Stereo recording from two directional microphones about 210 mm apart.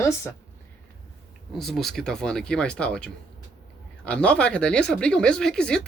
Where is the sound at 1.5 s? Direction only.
Centre (ahead or behind).